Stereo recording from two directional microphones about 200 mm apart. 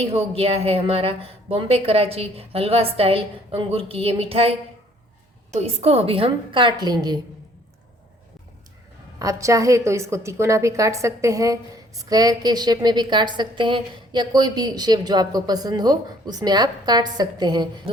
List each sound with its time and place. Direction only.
0.0 s a woman's voice: 30° right (ahead or behind)
9.1 s a woman's voice: 15° right (ahead or behind)